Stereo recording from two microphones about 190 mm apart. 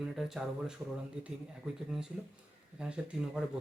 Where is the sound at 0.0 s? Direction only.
Centre (ahead or behind).